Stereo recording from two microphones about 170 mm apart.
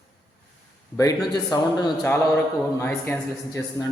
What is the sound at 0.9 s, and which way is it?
A man's voice, 20° left (ahead or behind).